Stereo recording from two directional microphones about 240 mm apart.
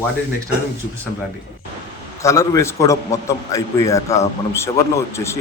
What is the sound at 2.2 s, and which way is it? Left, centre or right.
A man's voice, centre.